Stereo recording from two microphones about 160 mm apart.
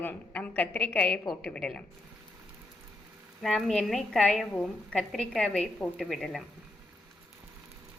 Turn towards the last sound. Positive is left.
turn(degrees=0)  # may be behind; listen again after turning